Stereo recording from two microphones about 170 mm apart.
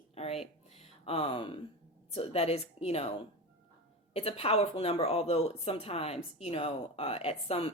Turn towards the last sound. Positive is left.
turn(degrees=35)  # may be behind; listen again after turning